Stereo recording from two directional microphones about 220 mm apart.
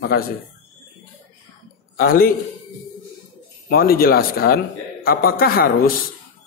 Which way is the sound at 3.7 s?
45° left (ahead or behind).